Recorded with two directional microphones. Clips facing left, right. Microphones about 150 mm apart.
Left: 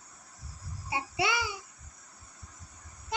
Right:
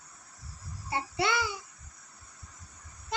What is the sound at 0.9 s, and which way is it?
Child singing, 10° left (ahead or behind).